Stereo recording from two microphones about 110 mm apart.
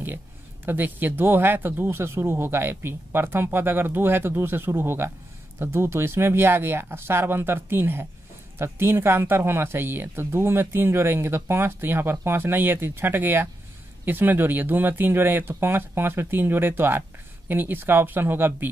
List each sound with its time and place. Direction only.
0.7 s speech: 15° right (ahead or behind)